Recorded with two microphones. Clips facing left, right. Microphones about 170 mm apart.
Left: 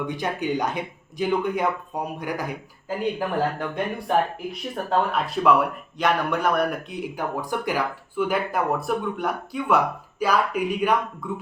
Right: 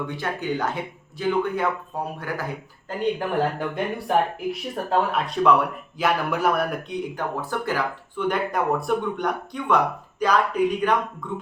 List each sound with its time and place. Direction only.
0.1 s speech: 15° left (ahead or behind)
3.0 s speech: centre (ahead or behind)
7.2 s speech: 15° left (ahead or behind)